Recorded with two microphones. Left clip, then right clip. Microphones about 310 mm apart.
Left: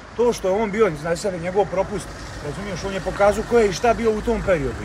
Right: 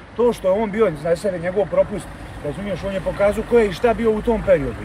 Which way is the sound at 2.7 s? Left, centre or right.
Centre.